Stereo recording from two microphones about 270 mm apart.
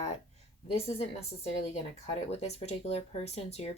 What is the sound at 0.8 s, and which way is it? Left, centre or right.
Speech, left.